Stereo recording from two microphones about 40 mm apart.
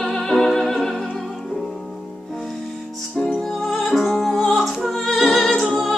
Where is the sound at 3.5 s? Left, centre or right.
Centre.